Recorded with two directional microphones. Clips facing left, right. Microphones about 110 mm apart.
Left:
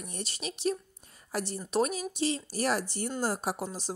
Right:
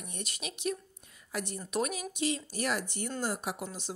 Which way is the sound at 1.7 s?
30° left (ahead or behind).